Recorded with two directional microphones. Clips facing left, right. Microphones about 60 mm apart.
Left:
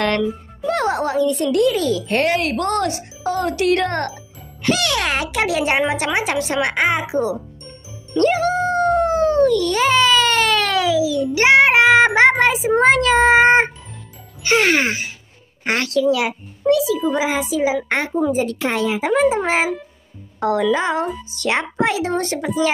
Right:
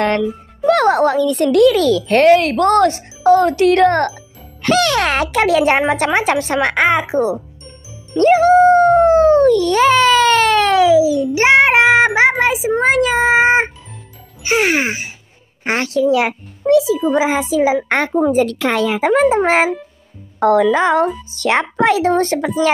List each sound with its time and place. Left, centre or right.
0.6 s a child's voice: right
8.1 s dog: right
9.7 s a sound: right
11.9 s a child's voice: centre; by 22.5 s right